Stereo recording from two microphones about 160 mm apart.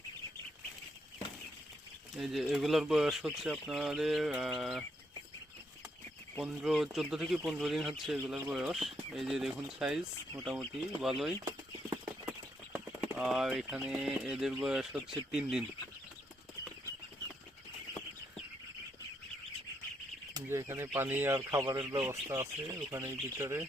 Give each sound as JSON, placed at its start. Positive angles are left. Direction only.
{"t": 2.1, "sound": "speech", "side_deg": -5}
{"t": 6.4, "sound": "speech", "side_deg": -5}
{"t": 11.4, "sound": "clip-clop", "side_deg": -20}
{"t": 12.7, "sound": "a sound", "side_deg": -5}
{"t": 13.7, "sound": "speech", "side_deg": -5}
{"t": 20.3, "sound": "speech", "side_deg": -20}